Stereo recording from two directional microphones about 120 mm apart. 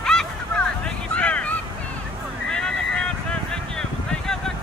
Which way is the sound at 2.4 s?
5° left (ahead or behind).